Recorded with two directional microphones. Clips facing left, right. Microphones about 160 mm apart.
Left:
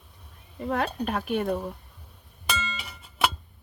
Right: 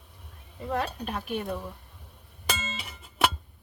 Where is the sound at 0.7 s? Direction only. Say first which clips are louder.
Left 3 dB; 60° left (ahead or behind).